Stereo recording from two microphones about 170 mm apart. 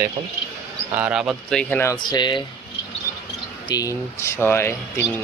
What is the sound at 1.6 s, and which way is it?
Speech, 10° left (ahead or behind).